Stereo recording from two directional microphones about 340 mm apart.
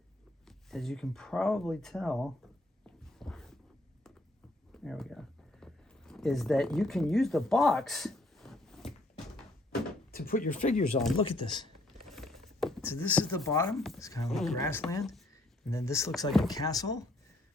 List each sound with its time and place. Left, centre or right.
0.4 s speech: centre
2.8 s dog: centre
4.7 s a sound: centre
10.1 s speech: left
12.1 s speech: centre